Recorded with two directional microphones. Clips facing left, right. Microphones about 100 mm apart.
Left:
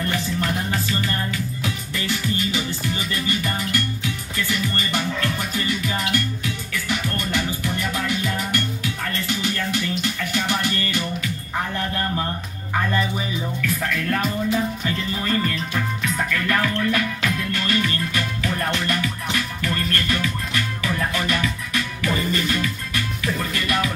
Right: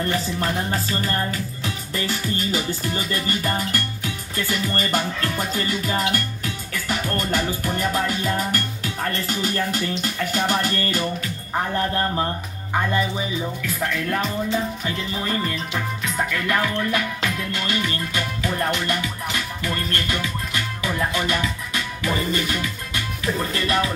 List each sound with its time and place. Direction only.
0.0 s music: 35° right (ahead or behind)
12.7 s speech: 20° right (ahead or behind)
13.8 s music: 15° right (ahead or behind)